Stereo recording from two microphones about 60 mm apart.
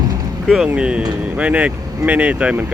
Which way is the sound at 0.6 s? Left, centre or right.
Centre.